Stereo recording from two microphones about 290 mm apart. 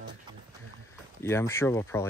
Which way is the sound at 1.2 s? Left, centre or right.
Centre.